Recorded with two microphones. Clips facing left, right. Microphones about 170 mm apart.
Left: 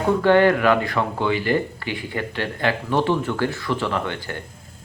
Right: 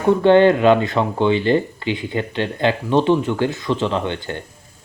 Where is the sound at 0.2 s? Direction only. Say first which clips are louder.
Right 3 dB; 25° right (ahead or behind).